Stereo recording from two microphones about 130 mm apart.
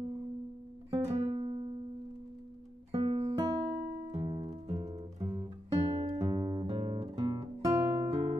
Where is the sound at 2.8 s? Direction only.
50° right (ahead or behind).